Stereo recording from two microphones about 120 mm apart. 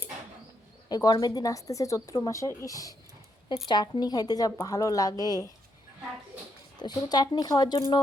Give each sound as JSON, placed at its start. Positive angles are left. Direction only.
{"t": 0.9, "sound": "a woman's voice", "side_deg": 35}
{"t": 6.3, "sound": "speech", "side_deg": -10}
{"t": 6.7, "sound": "a woman's voice", "side_deg": 35}